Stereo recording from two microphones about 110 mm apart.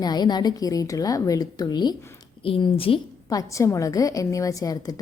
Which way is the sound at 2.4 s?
55° left (ahead or behind).